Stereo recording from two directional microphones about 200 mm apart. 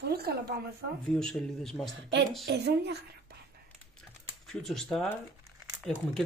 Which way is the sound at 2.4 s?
55° right (ahead or behind).